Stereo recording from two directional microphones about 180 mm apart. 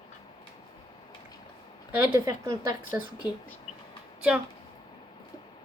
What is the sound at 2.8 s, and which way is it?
Speech, 10° right (ahead or behind).